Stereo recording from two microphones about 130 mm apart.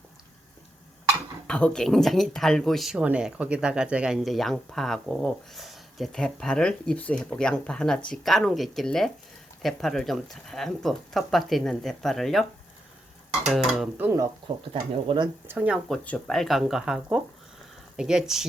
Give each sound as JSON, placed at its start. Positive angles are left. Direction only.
{"t": 1.5, "sound": "speech", "side_deg": 5}
{"t": 13.5, "sound": "speech", "side_deg": 0}
{"t": 13.9, "sound": "speech", "side_deg": -15}
{"t": 14.7, "sound": "speech", "side_deg": -40}
{"t": 15.4, "sound": "speech", "side_deg": -10}
{"t": 15.9, "sound": "speech", "side_deg": 5}